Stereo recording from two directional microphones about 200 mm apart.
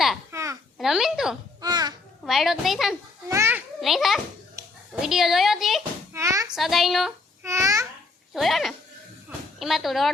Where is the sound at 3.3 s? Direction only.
10° right (ahead or behind).